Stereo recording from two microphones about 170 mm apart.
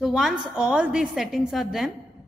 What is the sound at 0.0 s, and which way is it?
A woman's voice, centre (ahead or behind).